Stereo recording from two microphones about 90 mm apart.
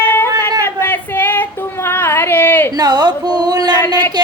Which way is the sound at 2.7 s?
50° right (ahead or behind).